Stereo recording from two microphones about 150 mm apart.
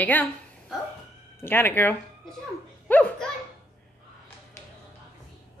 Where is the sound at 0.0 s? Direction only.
10° left (ahead or behind).